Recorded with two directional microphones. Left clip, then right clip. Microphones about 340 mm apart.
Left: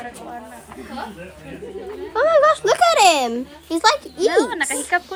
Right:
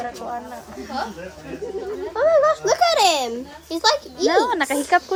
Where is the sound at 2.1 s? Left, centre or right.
Left.